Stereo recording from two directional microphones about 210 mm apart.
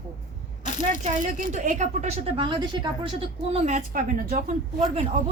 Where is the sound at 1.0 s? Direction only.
35° right (ahead or behind).